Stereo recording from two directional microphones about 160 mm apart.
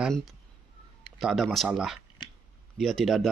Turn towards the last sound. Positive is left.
turn(degrees=0)  # may be behind; listen again after turning